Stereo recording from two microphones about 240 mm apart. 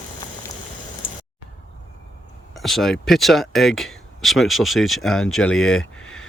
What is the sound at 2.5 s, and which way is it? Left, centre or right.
Speech, centre.